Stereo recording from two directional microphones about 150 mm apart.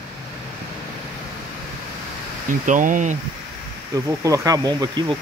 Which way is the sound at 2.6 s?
60° right (ahead or behind).